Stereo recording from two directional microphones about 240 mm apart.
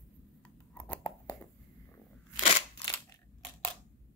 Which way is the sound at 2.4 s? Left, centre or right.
Centre.